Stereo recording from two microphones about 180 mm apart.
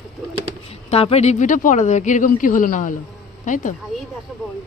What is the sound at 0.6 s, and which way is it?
Speech, 35° left (ahead or behind).